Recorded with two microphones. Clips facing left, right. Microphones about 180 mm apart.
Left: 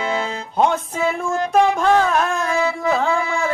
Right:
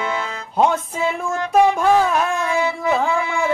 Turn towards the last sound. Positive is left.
turn(degrees=-5)  # may be behind; listen again after turning